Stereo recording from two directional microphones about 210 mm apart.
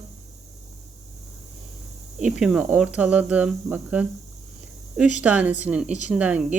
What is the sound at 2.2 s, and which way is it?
Speech, 5° right (ahead or behind).